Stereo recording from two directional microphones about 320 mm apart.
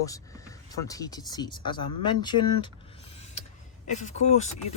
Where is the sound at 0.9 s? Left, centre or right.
Centre.